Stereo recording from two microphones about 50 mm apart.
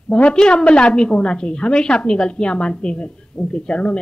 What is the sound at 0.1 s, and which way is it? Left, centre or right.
A woman's voice, centre.